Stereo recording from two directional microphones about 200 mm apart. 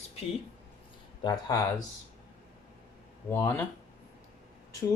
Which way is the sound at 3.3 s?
10° left (ahead or behind).